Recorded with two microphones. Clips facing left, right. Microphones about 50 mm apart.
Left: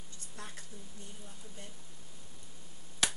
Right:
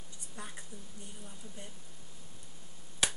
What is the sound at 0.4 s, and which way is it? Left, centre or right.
Speech, centre.